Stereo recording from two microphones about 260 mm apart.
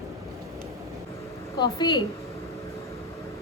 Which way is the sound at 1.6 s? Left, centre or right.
Centre.